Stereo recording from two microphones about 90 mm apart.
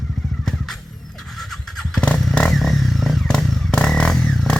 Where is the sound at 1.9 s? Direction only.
10° left (ahead or behind).